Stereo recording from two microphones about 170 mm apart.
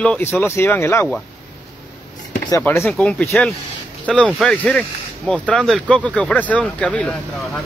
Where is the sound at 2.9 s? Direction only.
Centre (ahead or behind).